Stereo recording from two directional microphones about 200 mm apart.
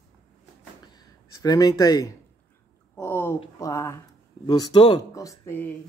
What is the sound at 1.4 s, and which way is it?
Speech, 20° left (ahead or behind).